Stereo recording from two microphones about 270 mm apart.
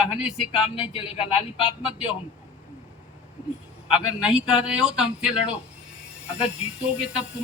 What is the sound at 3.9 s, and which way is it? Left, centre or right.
Speech, centre.